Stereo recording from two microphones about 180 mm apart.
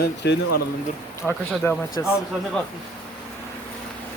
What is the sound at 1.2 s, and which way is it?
Speech, centre (ahead or behind).